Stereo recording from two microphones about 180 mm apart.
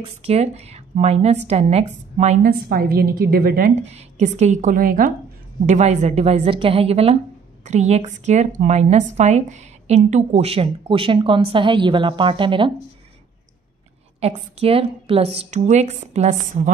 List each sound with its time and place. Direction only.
0.0 s a woman's voice: 35° right (ahead or behind)
2.6 s a woman's voice: 55° right (ahead or behind)
3.8 s a woman's voice: 35° right (ahead or behind)
5.7 s a woman's voice: 40° right (ahead or behind)
14.2 s a woman's voice: 30° right (ahead or behind)